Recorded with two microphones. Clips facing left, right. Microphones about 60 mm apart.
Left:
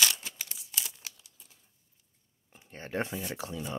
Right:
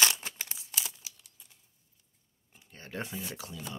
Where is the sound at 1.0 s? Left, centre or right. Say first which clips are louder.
Left 4 dB; left.